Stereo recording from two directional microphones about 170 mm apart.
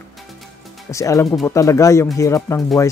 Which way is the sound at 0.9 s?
20° left (ahead or behind).